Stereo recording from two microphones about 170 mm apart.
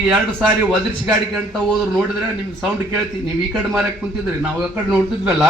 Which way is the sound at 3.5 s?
5° right (ahead or behind).